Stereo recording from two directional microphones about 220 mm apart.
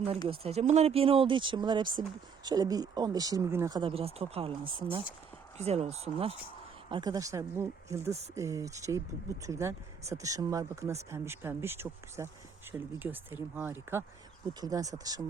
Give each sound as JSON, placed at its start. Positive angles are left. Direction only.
{"t": 0.3, "sound": "speech", "side_deg": -30}